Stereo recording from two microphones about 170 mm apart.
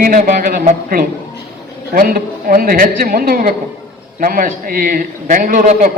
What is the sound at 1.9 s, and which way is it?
A man's voice, 55° right (ahead or behind).